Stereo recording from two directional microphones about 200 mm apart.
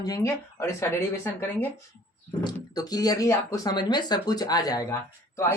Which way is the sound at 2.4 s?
20° left (ahead or behind).